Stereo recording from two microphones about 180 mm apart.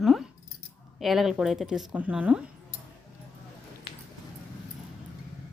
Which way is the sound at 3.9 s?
30° left (ahead or behind).